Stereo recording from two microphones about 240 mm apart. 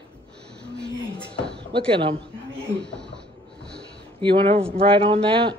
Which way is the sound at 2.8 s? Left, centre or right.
Centre.